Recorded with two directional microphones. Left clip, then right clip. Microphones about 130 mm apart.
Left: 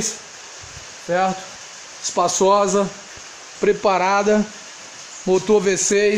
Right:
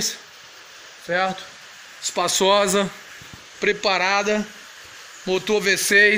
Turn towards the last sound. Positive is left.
turn(degrees=15)  # may be behind; listen again after turning